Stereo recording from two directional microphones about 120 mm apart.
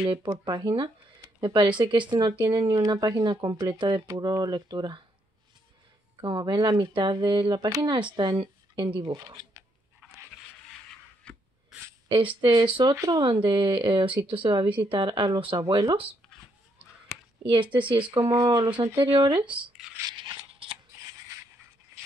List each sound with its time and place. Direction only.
0.0 s speech: 45° right (ahead or behind)
0.3 s speech: 35° right (ahead or behind)
6.2 s speech: 35° right (ahead or behind)
11.3 s a sound: 10° left (ahead or behind)
12.1 s speech: 45° right (ahead or behind)
12.9 s speech: 25° right (ahead or behind)
13.2 s speech: 40° right (ahead or behind)
17.5 s speech: 40° right (ahead or behind)
18.2 s speech: 25° right (ahead or behind)
18.9 s speech: 40° right (ahead or behind)
19.8 s a sound: 5° right (ahead or behind)
20.6 s shuffling cards: 50° right (ahead or behind)